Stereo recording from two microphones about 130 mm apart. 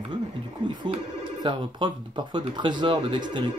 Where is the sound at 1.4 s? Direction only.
35° right (ahead or behind).